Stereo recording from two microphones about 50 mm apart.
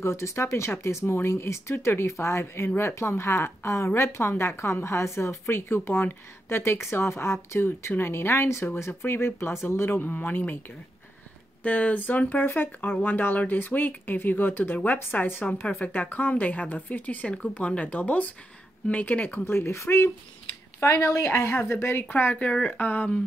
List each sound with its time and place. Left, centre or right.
0.0 s a woman's voice: left
11.6 s speech: left
15.1 s speech: left
19.4 s a woman's voice: left
22.1 s speech: left
22.4 s speech: left
22.8 s speech: left